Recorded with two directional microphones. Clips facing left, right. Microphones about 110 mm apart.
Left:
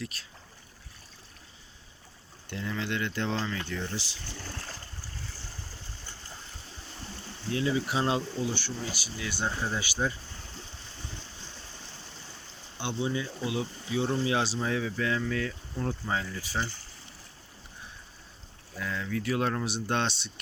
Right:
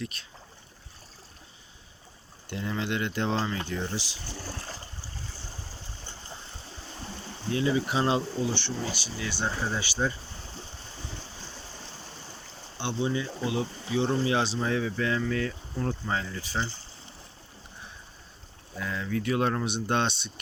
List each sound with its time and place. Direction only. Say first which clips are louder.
0.0 s speech: right 2 dB; centre (ahead or behind)
2.5 s speech: right 2 dB; 20° right (ahead or behind)
7.5 s speech: right 2 dB; centre (ahead or behind)
13.0 s speech: right 2 dB; 5° left (ahead or behind)
18.8 s speech: right 2 dB; 5° right (ahead or behind)